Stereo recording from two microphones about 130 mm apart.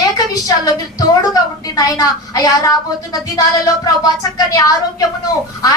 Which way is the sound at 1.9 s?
30° left (ahead or behind).